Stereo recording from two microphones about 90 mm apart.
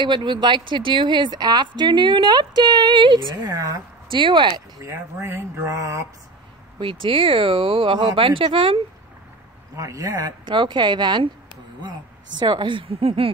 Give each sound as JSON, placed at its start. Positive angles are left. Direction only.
{"t": 0.0, "sound": "speech", "side_deg": -55}
{"t": 4.1, "sound": "speech", "side_deg": -60}
{"t": 4.8, "sound": "speech", "side_deg": -30}
{"t": 6.8, "sound": "speech", "side_deg": -75}
{"t": 9.8, "sound": "speech", "side_deg": -40}
{"t": 10.4, "sound": "speech", "side_deg": -65}
{"t": 12.4, "sound": "speech", "side_deg": -60}